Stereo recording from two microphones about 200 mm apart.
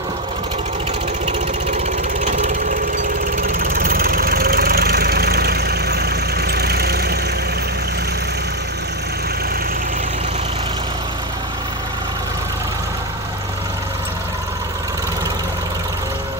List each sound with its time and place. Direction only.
2.2 s ratchet: 35° right (ahead or behind)
3.3 s engine: 45° right (ahead or behind)